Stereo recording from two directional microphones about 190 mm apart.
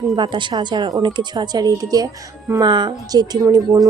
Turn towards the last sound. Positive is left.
turn(degrees=-15)  # may be behind; listen again after turning